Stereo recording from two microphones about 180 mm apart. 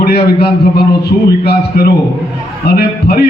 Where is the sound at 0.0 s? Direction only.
60° left (ahead or behind).